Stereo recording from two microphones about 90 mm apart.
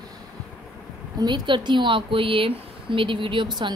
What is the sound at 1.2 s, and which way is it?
Speech, 55° right (ahead or behind).